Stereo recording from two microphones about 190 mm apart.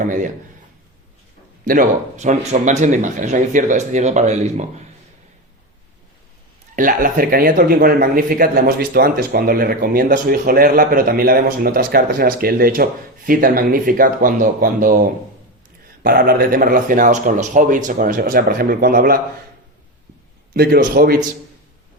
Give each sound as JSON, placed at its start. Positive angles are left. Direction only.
{"t": 1.6, "sound": "speech", "side_deg": -45}
{"t": 6.7, "sound": "speech", "side_deg": -45}
{"t": 20.5, "sound": "speech", "side_deg": -55}